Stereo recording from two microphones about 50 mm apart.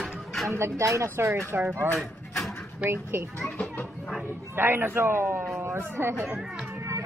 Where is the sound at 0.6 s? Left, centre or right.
Right.